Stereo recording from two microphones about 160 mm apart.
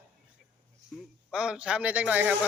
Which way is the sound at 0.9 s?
5° right (ahead or behind).